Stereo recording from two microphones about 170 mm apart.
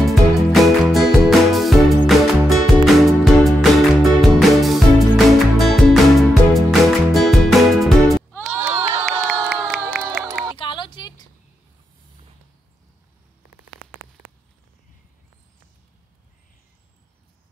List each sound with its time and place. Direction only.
0.0 s music: centre (ahead or behind)
8.6 s crowd: 35° right (ahead or behind)
9.0 s crowd: centre (ahead or behind)
10.6 s a sound: 30° left (ahead or behind)